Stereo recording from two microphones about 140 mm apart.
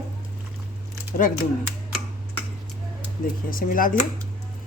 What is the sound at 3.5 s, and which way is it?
Speech, 80° left.